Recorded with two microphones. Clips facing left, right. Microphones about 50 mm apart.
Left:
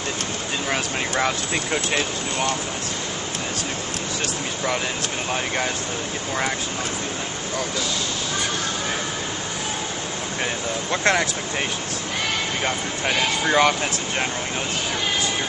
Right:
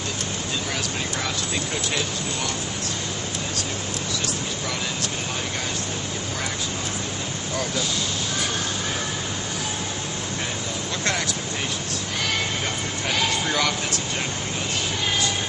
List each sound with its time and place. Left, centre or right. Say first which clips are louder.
0.7 s speech: left 4 dB; left
10.9 s speech: left 7 dB; left
12.6 s speech: left 3 dB; left